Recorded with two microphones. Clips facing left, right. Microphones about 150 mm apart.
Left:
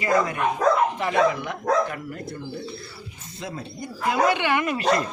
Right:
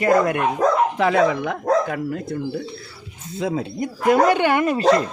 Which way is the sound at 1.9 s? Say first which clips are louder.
Right 8 dB; 90° right.